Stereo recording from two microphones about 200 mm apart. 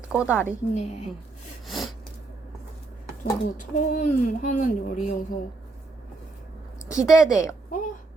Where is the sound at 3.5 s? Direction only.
40° left (ahead or behind).